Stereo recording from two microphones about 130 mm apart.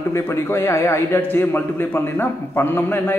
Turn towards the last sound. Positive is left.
turn(degrees=15)  # may be behind; listen again after turning